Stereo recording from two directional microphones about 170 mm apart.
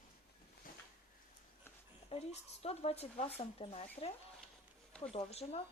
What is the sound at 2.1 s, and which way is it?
Speech, 35° left (ahead or behind).